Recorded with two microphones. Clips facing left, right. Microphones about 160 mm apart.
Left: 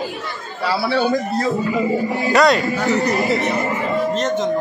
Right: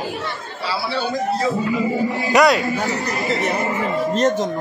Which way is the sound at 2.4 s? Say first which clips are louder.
Even; 5° right (ahead or behind).